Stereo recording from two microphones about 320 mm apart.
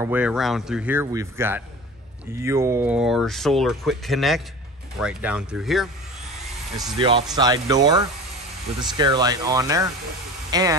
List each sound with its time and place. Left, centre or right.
0.0 s speech: centre
7.0 s speech: centre